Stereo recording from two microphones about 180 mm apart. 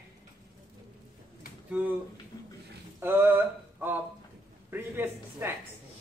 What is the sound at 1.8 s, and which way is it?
Speech, 10° right (ahead or behind).